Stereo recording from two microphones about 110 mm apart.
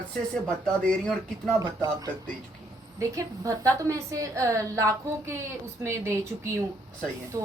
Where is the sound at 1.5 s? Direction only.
35° right (ahead or behind).